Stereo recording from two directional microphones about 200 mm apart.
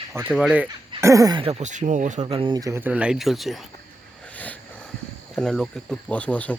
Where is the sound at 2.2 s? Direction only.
25° right (ahead or behind); by 3.6 s centre (ahead or behind).